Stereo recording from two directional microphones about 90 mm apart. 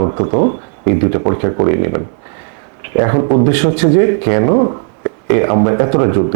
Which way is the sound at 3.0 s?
30° right (ahead or behind).